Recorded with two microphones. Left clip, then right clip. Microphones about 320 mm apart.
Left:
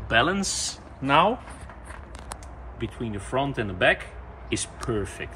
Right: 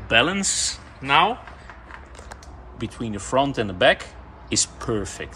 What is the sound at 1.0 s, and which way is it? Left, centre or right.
Speech, centre.